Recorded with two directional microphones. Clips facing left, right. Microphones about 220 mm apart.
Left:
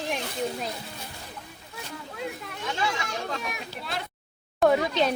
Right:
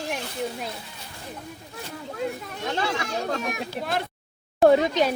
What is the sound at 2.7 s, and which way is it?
Speech, 50° right (ahead or behind).